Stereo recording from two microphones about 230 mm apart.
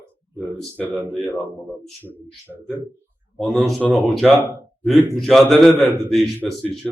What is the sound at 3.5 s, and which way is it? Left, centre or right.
A man's voice, centre.